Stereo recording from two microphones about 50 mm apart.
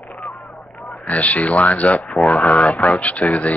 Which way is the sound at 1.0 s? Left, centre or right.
Left.